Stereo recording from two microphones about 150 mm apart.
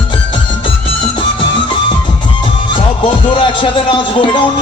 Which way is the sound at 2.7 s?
30° left (ahead or behind).